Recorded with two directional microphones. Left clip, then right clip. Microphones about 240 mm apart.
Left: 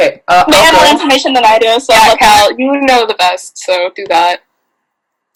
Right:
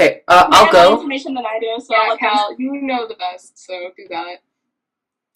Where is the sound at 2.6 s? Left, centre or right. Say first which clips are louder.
Left 12 dB; left.